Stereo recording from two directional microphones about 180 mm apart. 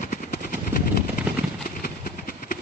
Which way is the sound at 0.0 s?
45° left (ahead or behind).